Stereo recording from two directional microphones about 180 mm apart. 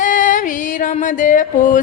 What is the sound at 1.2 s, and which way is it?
Music, 45° left (ahead or behind).